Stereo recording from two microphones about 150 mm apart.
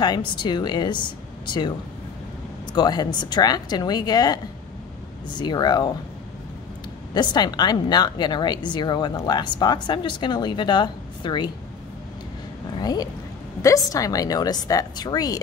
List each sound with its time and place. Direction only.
0.0 s a woman's voice: 30° left (ahead or behind)
2.7 s a woman's voice: 30° left (ahead or behind)
5.4 s a woman's voice: 30° left (ahead or behind)
7.2 s a woman's voice: 30° left (ahead or behind)
12.8 s a woman's voice: 25° left (ahead or behind)